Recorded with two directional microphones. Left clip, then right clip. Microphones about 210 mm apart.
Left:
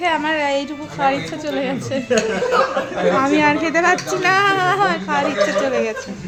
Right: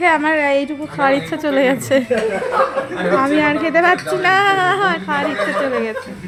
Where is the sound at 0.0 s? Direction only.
30° right (ahead or behind).